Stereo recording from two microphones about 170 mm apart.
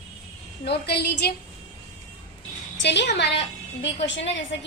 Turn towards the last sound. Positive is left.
turn(degrees=90)